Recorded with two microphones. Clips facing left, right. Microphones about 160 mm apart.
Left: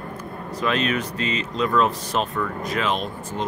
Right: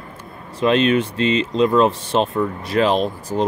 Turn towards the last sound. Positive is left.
turn(degrees=-35)  # may be behind; listen again after turning